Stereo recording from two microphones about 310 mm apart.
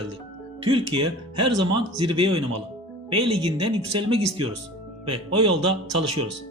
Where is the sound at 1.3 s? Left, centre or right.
Right.